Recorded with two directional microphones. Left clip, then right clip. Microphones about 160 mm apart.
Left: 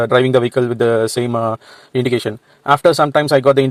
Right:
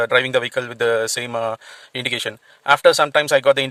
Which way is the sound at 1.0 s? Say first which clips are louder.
Left 5 dB; 40° right (ahead or behind).